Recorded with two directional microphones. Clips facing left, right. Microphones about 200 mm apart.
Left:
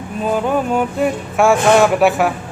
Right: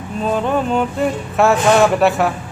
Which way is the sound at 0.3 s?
10° left (ahead or behind).